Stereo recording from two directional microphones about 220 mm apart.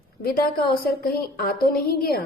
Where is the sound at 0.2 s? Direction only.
45° left (ahead or behind).